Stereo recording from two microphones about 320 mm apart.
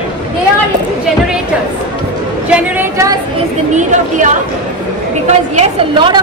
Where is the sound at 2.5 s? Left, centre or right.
Centre.